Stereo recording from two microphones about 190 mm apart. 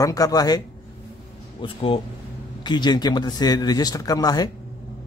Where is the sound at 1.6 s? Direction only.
30° left (ahead or behind).